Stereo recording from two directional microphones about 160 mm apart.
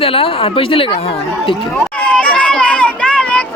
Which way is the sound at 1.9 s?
10° left (ahead or behind).